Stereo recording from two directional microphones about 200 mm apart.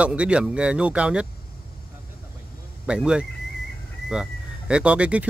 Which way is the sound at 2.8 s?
5° right (ahead or behind).